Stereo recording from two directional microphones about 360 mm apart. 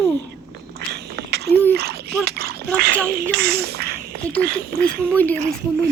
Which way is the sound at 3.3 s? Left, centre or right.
Right.